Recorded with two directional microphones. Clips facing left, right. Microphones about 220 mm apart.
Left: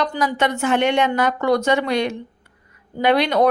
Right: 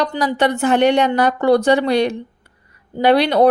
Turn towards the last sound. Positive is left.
turn(degrees=-35)  # may be behind; listen again after turning